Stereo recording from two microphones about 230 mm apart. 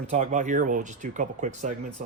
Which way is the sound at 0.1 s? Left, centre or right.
Right.